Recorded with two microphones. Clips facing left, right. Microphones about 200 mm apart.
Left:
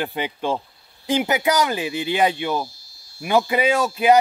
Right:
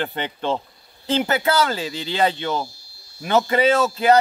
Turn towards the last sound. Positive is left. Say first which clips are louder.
# right 1 dB
turn(degrees=15)  # may be behind; listen again after turning